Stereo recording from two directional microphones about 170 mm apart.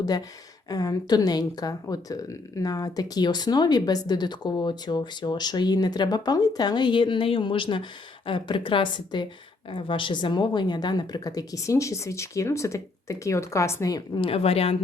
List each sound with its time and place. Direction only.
0.0 s a woman's voice: 20° left (ahead or behind)
14.3 s speech: 35° left (ahead or behind)